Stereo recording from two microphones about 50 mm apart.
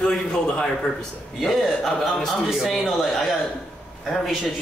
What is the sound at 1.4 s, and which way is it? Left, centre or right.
A man's voice, centre.